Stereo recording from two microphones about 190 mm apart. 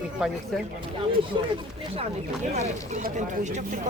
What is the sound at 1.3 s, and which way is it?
Speech, 25° right (ahead or behind).